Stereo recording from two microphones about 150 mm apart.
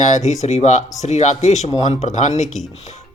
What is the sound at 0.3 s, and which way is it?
Speech, 50° left (ahead or behind).